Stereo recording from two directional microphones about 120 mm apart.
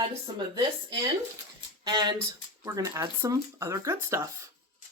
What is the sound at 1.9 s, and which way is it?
Speech, 35° right (ahead or behind).